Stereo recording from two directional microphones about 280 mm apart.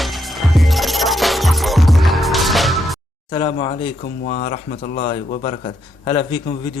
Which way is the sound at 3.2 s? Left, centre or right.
Centre.